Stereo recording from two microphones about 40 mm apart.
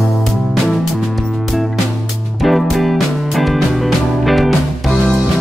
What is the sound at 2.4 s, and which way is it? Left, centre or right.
Music, centre.